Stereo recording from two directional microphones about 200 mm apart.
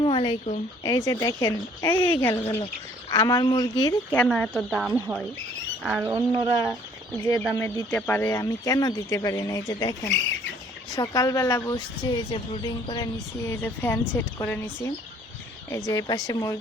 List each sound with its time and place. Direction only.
0.0 s speech: 25° left (ahead or behind)
4.1 s speech: 5° left (ahead or behind)
4.9 s speech: 15° right (ahead or behind)
6.1 s speech: 25° right (ahead or behind)
7.5 s speech: 15° left (ahead or behind)